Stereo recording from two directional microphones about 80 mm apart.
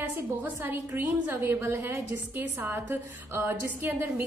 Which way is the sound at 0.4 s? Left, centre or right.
Right.